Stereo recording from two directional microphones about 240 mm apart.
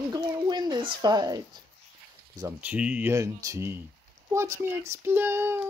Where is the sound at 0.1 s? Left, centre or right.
Centre.